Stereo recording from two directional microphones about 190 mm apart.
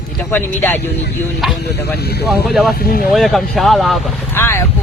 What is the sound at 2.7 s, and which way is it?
Speech, 50° left (ahead or behind).